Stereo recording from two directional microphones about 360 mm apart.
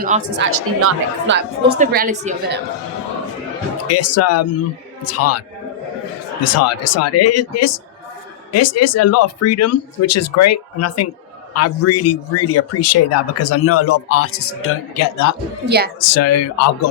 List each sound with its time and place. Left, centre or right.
0.0 s speech: right
1.6 s a woman's voice: right
3.8 s a man's voice: left
6.4 s a man's voice: left